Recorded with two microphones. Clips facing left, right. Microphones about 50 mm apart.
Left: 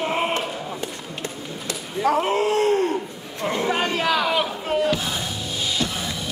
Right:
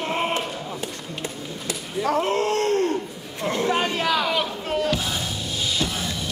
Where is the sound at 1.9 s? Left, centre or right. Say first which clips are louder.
Left 2 dB; centre.